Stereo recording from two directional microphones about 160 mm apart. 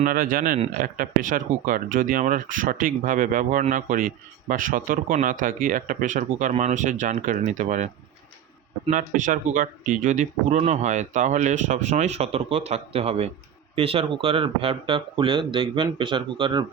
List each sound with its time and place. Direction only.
0.0 s speech: 60° right (ahead or behind)
8.9 s speech: 55° right (ahead or behind); by 16.6 s 30° right (ahead or behind)